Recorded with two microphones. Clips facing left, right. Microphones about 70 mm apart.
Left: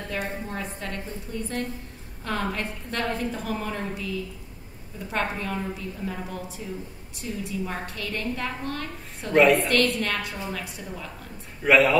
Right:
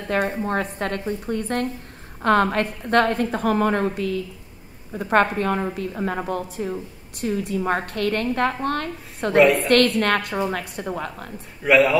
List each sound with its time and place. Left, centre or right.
0.1 s a woman's voice: right
9.4 s a man's voice: centre
9.7 s a woman's voice: right
11.6 s a man's voice: centre